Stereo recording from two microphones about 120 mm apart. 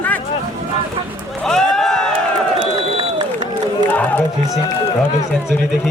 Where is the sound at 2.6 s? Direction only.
40° right (ahead or behind).